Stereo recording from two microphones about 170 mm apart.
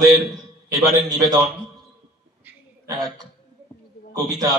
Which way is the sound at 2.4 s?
10° right (ahead or behind).